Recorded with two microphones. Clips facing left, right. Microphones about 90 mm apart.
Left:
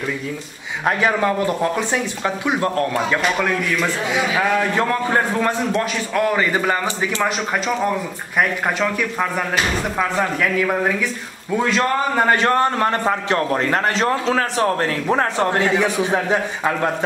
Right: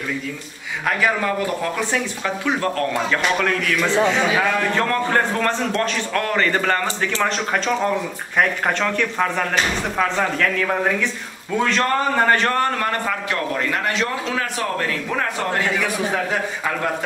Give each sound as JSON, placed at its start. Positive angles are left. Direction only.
{"t": 0.8, "sound": "a man's voice", "side_deg": 25}